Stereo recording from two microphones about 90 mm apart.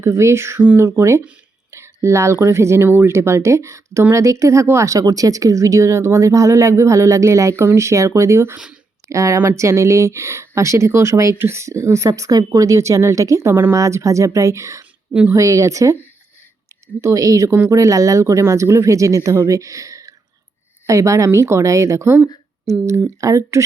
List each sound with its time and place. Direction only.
0.0 s speech: 30° right (ahead or behind)
8.5 s speech: 10° right (ahead or behind)
9.0 s speech: 35° right (ahead or behind)
17.0 s a woman's voice: 35° right (ahead or behind)